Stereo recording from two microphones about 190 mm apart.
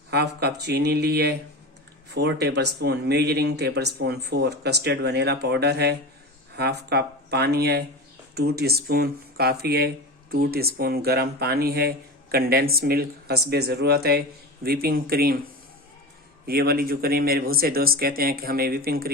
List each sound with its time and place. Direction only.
0.1 s speech: 60° right (ahead or behind)
16.5 s a man's voice: 50° right (ahead or behind)